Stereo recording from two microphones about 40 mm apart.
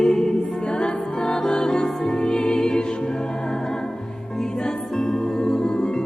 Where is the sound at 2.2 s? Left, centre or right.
Left.